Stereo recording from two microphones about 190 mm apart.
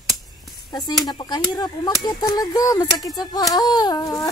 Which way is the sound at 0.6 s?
20° left (ahead or behind).